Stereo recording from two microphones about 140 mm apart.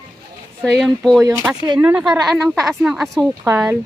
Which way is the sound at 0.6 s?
10° right (ahead or behind).